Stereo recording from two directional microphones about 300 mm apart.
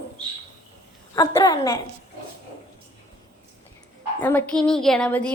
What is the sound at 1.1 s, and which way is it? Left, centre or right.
Speech, centre.